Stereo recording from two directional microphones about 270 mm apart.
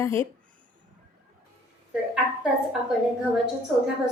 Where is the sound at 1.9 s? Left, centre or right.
Centre.